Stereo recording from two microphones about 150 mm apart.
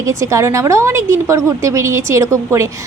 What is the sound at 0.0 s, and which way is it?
A woman's voice, 20° right (ahead or behind).